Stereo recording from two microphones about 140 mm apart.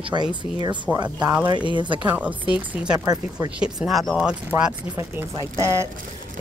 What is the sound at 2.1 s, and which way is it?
Speech, 10° right (ahead or behind).